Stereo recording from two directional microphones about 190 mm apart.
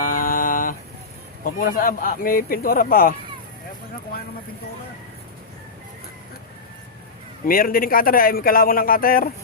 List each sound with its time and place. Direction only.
0.0 s a sound: 45° left (ahead or behind)
1.5 s a man's voice: 50° left (ahead or behind)
7.4 s a man's voice: 50° left (ahead or behind)